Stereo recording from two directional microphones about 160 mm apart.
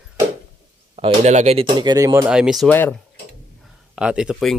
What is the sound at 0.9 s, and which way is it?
Speech, 40° right (ahead or behind).